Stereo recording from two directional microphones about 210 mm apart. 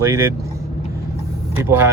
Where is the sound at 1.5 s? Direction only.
10° right (ahead or behind).